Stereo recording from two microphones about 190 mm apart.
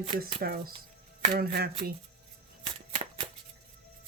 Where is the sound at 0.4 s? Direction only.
50° right (ahead or behind).